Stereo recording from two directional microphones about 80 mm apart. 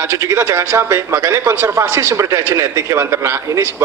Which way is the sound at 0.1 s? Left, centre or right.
Right.